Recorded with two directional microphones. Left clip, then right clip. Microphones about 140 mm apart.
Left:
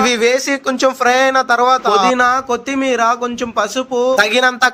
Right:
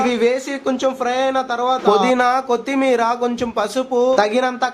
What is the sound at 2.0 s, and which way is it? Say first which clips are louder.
Speech: left 3 dB; 25° left (ahead or behind).